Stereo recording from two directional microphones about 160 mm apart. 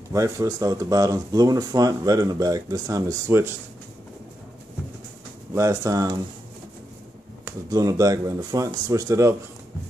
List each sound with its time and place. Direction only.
0.1 s speech: 20° right (ahead or behind)
5.5 s speech: 20° right (ahead or behind)
7.4 s speech: 20° right (ahead or behind)